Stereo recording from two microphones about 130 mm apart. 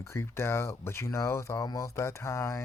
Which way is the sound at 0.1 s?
20° left (ahead or behind).